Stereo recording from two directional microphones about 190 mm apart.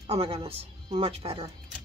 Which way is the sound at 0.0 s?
35° right (ahead or behind).